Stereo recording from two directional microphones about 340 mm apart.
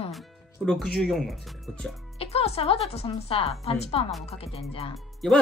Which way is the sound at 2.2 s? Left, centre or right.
Centre.